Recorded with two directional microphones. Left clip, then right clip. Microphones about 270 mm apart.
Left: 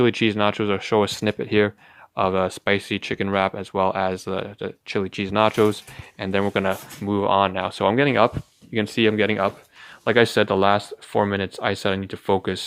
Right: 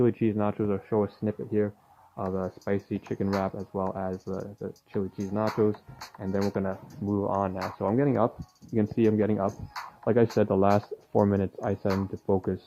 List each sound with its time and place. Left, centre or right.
0.0 s speech: centre
11.9 s speech: left